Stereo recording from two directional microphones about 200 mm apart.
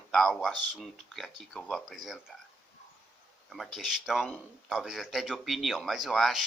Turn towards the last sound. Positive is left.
turn(degrees=0)  # may be behind; listen again after turning